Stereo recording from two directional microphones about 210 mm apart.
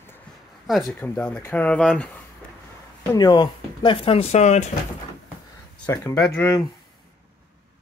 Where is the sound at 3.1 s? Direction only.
20° left (ahead or behind).